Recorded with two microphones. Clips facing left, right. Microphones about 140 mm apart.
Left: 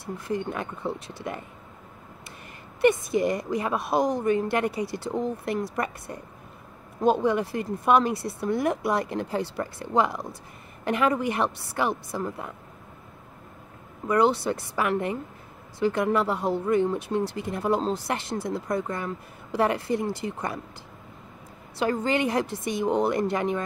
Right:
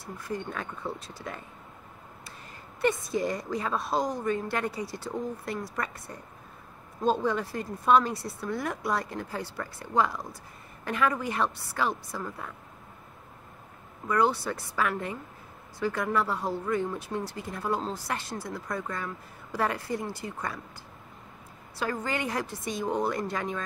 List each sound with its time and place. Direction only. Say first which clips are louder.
0.3 s speech: left 5 dB; 20° left (ahead or behind)
3.3 s speech: left 4 dB; 15° left (ahead or behind)
14.0 s speech: left 4 dB; 20° left (ahead or behind)
21.7 s speech: left 6 dB; 20° left (ahead or behind)